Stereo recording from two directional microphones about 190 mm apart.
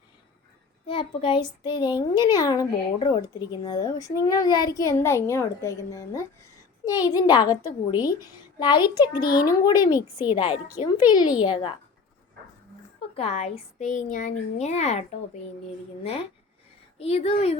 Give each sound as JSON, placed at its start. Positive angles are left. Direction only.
{"t": 0.9, "sound": "a child's voice", "side_deg": 30}
{"t": 13.1, "sound": "a woman's voice", "side_deg": 35}
{"t": 17.0, "sound": "a woman's voice", "side_deg": 30}